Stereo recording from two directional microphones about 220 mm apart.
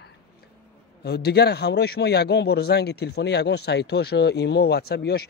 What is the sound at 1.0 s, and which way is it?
A man's voice, 45° left (ahead or behind).